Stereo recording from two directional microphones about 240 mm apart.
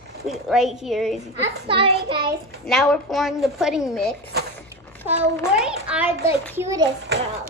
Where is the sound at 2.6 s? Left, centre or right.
Centre.